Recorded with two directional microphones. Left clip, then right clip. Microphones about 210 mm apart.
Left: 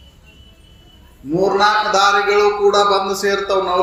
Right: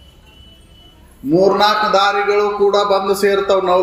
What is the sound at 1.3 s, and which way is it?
A man's voice, 20° right (ahead or behind).